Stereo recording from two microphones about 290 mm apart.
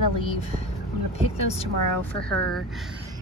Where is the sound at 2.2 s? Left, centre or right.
Centre.